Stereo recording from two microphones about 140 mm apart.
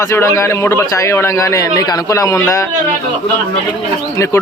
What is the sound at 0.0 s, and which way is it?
A man's voice, 20° left (ahead or behind).